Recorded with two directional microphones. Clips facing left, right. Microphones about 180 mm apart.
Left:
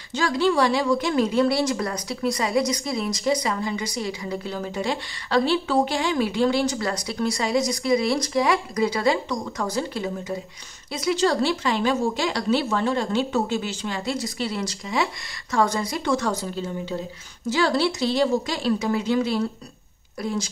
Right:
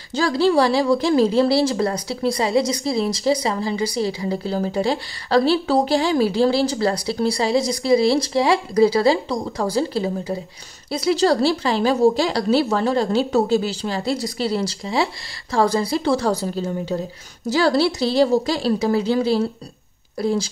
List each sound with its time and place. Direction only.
0.1 s speech: 35° right (ahead or behind)